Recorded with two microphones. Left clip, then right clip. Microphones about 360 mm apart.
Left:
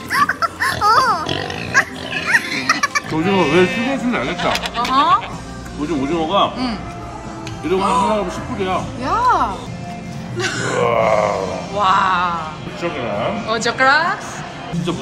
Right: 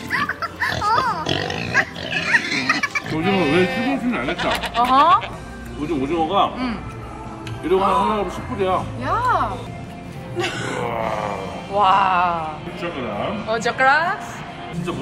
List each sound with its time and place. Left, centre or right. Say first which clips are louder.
0.1 s pig: left 7 dB; centre
6.2 s speech: left 2 dB; centre
10.9 s grunt: left 11 dB; left
11.8 s speech: left 1 dB; centre
13.5 s speech: left 2 dB; centre